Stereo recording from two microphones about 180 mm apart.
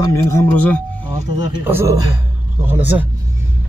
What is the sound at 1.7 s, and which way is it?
Speech, 10° right (ahead or behind).